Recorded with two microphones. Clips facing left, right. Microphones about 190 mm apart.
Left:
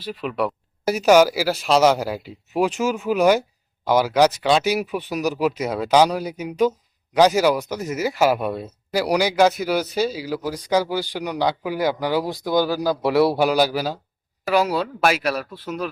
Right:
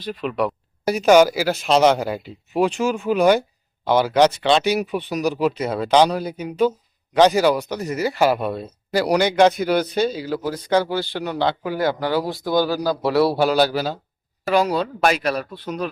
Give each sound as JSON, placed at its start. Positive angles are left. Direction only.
{"t": 0.0, "sound": "speech", "side_deg": 5}